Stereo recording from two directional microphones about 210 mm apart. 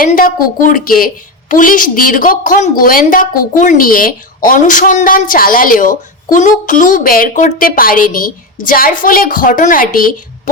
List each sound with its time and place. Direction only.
0.0 s a woman's voice: 40° left (ahead or behind)